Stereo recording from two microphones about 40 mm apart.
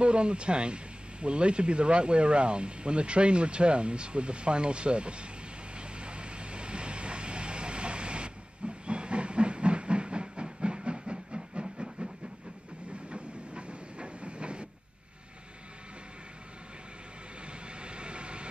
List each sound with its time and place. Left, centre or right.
0.0 s speech: right
5.8 s vehicle: right
11.6 s train: centre
13.1 s train: right
17.5 s vehicle: right